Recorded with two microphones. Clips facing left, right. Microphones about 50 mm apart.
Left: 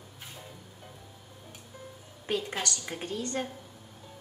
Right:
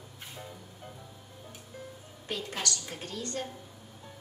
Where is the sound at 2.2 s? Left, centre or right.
Left.